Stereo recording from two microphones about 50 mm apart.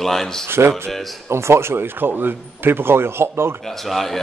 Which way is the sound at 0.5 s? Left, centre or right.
Right.